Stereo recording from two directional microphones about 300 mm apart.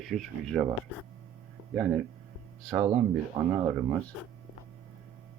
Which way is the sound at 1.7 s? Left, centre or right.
Centre.